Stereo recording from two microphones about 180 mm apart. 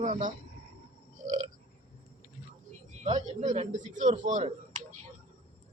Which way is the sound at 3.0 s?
40° right (ahead or behind).